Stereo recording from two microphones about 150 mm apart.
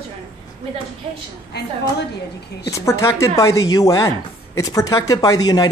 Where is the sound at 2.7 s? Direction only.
20° left (ahead or behind).